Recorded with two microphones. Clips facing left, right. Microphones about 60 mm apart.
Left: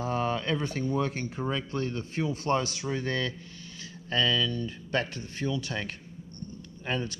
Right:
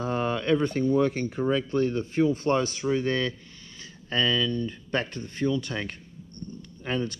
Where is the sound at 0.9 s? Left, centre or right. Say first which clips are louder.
Right 6 dB; right.